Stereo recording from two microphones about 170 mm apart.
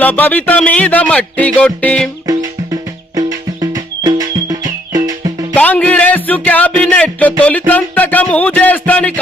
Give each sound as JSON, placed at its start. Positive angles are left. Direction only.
{"t": 0.0, "sound": "speech", "side_deg": 10}
{"t": 3.2, "sound": "music", "side_deg": -20}
{"t": 5.5, "sound": "music", "side_deg": 10}